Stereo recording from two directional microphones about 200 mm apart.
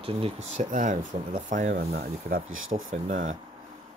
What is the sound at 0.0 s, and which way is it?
Speech, 30° right (ahead or behind).